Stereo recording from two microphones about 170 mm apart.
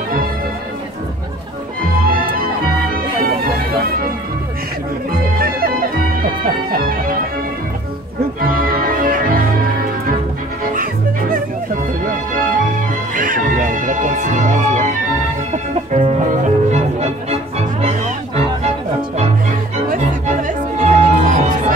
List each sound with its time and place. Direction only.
2.0 s music: 60° right (ahead or behind)
5.1 s music: 60° right (ahead or behind)
8.4 s music: 60° right (ahead or behind)
10.6 s music: 55° right (ahead or behind)
13.1 s music: 50° right (ahead or behind)
19.9 s music: 50° right (ahead or behind)